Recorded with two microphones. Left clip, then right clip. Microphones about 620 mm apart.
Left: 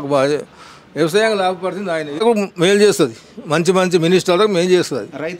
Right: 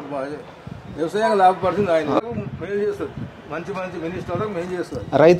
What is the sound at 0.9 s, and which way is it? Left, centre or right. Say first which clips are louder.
Speech: left 8 dB; left.